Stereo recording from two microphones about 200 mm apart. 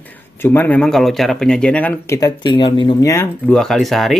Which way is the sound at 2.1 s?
20° left (ahead or behind).